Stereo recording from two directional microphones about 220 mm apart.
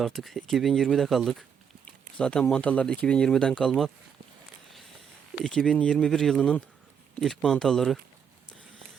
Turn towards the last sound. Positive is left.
turn(degrees=0)  # may be behind; listen again after turning